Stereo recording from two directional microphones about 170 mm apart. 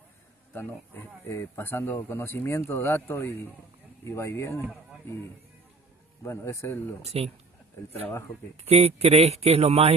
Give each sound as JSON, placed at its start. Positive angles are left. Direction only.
{"t": 0.5, "sound": "speech", "side_deg": 10}
{"t": 6.2, "sound": "speech", "side_deg": 15}
{"t": 7.0, "sound": "speech", "side_deg": -35}
{"t": 8.6, "sound": "speech", "side_deg": -40}